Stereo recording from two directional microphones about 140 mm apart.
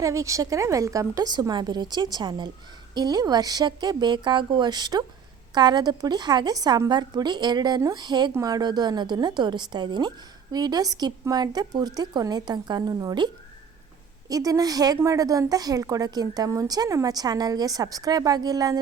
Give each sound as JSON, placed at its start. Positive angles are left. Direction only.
{"t": 0.0, "sound": "a woman's voice", "side_deg": -20}